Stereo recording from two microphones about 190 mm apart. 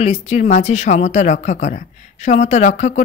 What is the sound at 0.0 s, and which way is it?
Speech, 35° left (ahead or behind).